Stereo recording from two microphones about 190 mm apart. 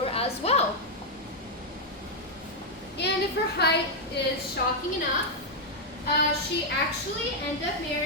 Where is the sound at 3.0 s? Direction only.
65° left (ahead or behind).